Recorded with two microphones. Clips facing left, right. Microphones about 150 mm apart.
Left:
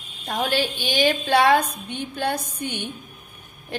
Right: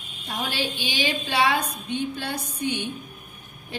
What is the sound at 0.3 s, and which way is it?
A woman's voice, 55° left (ahead or behind).